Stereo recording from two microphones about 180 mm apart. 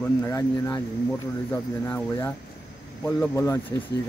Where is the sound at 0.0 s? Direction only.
15° left (ahead or behind).